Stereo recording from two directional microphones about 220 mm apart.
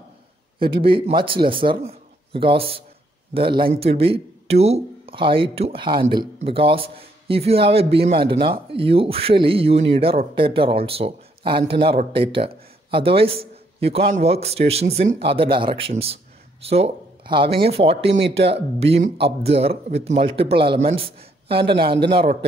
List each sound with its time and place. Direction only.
0.6 s speech: 25° right (ahead or behind)
21.7 s a man's voice: 50° right (ahead or behind)